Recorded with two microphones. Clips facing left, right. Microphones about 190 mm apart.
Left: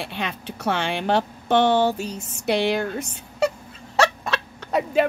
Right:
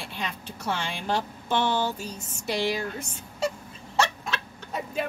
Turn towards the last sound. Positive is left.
turn(degrees=75)  # may be behind; listen again after turning